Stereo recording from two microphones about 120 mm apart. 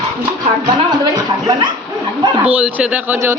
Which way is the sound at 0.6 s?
40° right (ahead or behind).